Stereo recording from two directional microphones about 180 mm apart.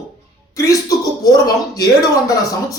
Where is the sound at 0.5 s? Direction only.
20° left (ahead or behind).